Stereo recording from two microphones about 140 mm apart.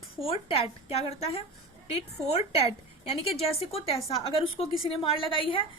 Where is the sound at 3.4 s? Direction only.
45° left (ahead or behind).